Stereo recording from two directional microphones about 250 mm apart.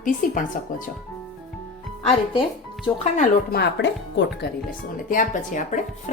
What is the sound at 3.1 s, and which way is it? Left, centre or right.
Speech, left.